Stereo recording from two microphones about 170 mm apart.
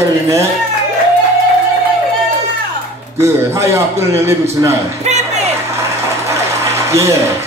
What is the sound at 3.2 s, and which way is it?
A man's voice, 15° right (ahead or behind).